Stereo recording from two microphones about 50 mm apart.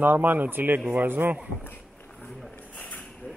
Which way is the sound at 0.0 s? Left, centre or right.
Right.